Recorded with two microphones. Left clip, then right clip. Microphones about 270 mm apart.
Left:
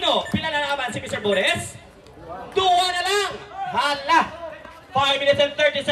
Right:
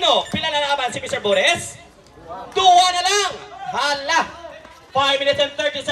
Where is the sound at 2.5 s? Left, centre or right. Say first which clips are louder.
Right 6 dB; right.